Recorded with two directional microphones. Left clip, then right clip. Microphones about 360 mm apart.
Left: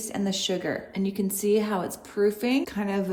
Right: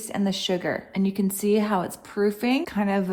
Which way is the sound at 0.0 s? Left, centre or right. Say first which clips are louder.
Right 1 dB; centre.